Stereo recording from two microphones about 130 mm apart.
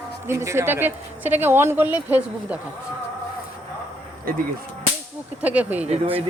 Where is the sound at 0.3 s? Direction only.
20° right (ahead or behind).